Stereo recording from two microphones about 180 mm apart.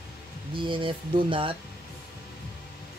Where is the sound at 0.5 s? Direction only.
30° right (ahead or behind).